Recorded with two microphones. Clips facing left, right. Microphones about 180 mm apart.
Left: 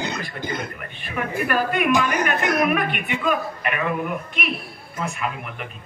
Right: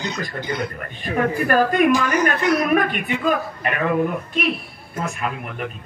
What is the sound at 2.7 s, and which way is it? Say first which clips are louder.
Speech: right 4 dB; 35° right (ahead or behind).